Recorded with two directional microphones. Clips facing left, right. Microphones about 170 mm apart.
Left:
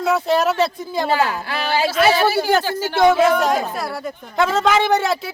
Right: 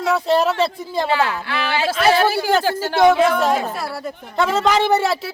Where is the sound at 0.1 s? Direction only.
Centre (ahead or behind).